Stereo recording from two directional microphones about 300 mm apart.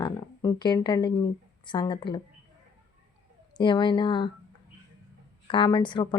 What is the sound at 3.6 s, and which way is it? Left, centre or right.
Speech, centre.